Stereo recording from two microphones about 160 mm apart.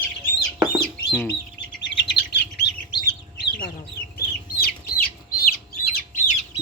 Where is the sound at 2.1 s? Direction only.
90° left.